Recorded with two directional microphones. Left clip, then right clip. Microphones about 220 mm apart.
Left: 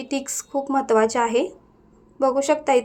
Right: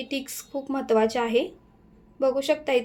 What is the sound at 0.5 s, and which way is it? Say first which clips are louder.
A woman's voice: left 5 dB; 10° left (ahead or behind).